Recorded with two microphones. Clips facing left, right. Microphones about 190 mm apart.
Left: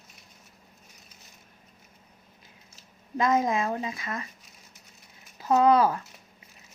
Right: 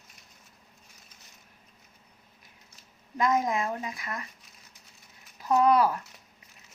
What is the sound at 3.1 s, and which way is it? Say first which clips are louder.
A woman's voice: left 2 dB; 25° left (ahead or behind).